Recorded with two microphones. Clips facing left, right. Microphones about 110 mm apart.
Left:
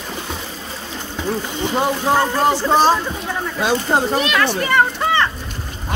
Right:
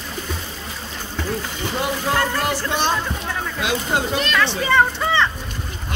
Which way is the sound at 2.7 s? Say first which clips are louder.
Left 7 dB; 35° left (ahead or behind).